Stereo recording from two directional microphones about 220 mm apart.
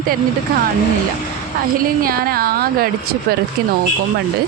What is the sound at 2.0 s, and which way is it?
Speech, 40° right (ahead or behind).